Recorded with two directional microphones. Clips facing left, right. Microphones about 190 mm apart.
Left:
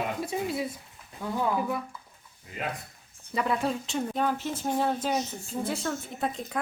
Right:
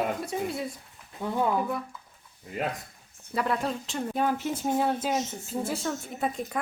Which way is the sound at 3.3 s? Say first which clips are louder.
Left 1 dB; centre (ahead or behind).